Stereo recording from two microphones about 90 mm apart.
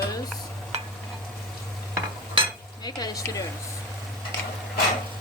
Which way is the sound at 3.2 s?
40° left (ahead or behind).